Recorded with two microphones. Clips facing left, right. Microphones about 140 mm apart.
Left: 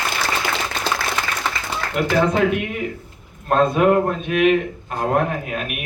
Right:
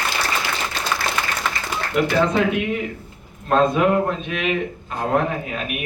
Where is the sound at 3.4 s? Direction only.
50° left (ahead or behind).